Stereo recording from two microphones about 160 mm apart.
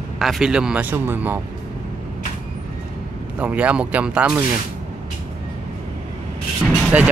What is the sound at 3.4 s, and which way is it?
Speech, 10° right (ahead or behind).